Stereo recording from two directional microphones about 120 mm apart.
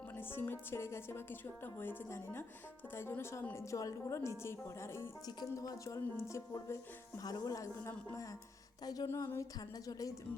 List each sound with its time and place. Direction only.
0.2 s a woman's voice: 20° left (ahead or behind)
5.2 s a woman's voice: 30° left (ahead or behind)
9.0 s a woman's voice: 20° left (ahead or behind)